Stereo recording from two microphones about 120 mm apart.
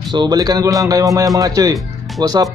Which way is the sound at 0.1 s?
35° right (ahead or behind).